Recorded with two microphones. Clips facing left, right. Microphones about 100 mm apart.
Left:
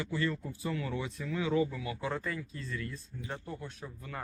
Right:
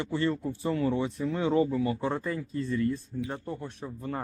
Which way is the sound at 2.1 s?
25° right (ahead or behind).